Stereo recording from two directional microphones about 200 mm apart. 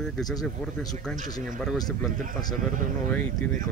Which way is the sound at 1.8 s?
20° left (ahead or behind).